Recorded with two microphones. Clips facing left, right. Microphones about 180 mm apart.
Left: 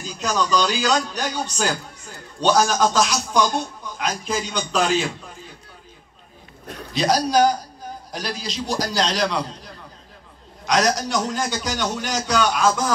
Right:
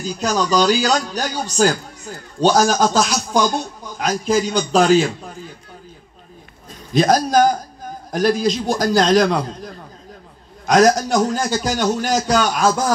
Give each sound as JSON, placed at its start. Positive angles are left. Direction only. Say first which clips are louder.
{"t": 0.0, "sound": "speech", "louder": "right 4 dB", "side_deg": -35}
{"t": 4.3, "sound": "speech", "louder": "right 11 dB", "side_deg": -35}
{"t": 6.9, "sound": "a man's voice", "louder": "right 5 dB", "side_deg": -50}